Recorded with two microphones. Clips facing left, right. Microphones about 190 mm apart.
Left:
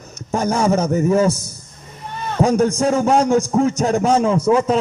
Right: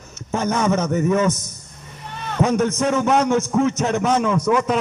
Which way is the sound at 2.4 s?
35° left (ahead or behind).